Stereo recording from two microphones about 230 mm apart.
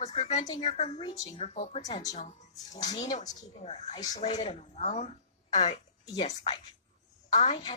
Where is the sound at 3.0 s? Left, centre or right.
Left.